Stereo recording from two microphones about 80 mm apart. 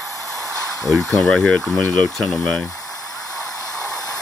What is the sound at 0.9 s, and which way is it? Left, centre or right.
Speech, centre.